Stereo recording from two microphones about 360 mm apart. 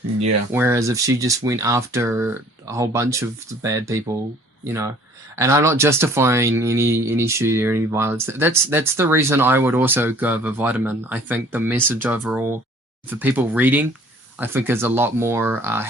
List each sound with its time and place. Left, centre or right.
0.5 s speech: centre